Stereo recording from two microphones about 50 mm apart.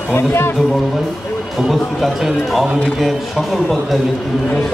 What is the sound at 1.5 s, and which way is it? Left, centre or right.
Speech, centre.